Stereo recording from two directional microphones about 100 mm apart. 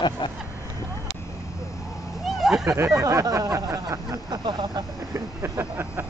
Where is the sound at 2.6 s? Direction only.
30° right (ahead or behind); by 4.8 s 45° right (ahead or behind).